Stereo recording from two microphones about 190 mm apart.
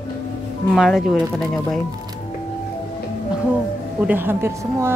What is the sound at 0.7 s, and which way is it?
Speech, centre (ahead or behind).